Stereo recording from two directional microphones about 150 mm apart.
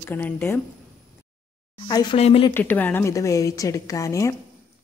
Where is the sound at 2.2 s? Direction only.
45° left (ahead or behind).